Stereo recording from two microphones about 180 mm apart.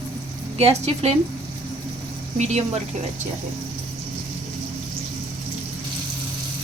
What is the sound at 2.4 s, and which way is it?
Speech, 40° right (ahead or behind).